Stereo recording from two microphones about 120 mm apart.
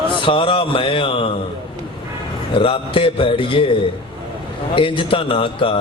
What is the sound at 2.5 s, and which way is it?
Mantra, 50° left (ahead or behind).